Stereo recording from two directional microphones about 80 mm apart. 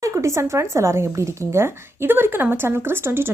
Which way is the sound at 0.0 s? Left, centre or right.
Right.